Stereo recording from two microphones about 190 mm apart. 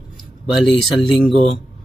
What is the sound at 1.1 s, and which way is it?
Speech, centre (ahead or behind).